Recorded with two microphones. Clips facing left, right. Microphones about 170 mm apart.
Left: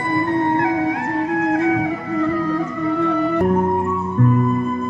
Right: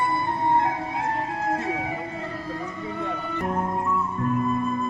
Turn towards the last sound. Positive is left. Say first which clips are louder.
# left 12 dB
turn(degrees=85)